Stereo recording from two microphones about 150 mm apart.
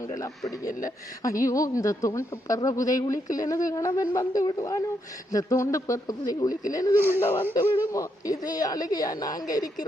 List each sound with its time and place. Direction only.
0.1 s speech: 20° left (ahead or behind)
0.7 s speech: 65° left (ahead or behind)
1.2 s speech: 20° left (ahead or behind)